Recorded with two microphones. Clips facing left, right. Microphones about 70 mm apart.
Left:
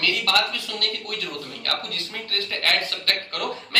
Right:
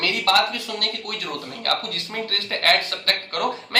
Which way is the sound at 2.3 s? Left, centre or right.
Right.